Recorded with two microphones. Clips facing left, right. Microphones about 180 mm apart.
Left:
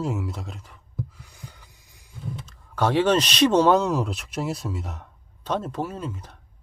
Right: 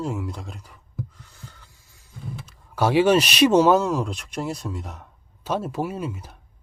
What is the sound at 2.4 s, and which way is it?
Speech, 10° right (ahead or behind).